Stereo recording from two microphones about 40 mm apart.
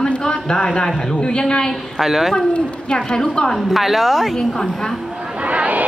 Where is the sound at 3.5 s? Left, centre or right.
Centre.